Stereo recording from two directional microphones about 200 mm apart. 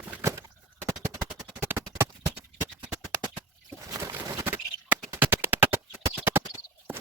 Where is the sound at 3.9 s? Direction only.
10° right (ahead or behind).